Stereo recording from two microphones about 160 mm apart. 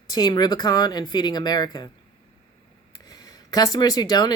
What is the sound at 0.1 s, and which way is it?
Speech, 25° left (ahead or behind).